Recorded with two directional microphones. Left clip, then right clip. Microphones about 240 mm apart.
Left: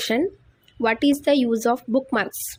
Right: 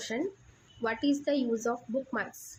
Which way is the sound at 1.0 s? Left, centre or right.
Left.